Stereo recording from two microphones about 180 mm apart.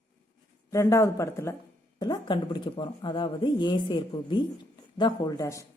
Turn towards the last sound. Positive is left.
turn(degrees=15)  # may be behind; listen again after turning